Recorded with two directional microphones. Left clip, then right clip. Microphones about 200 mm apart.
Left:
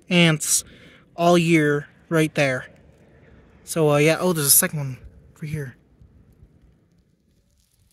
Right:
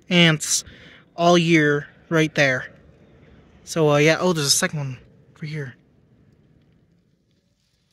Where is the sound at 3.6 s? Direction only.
Centre (ahead or behind).